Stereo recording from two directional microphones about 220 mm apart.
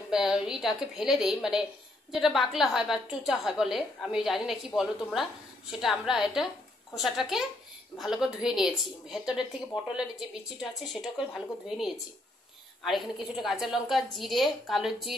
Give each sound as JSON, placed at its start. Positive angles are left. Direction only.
{"t": 0.1, "sound": "a woman's voice", "side_deg": 0}
{"t": 10.6, "sound": "a woman's voice", "side_deg": 0}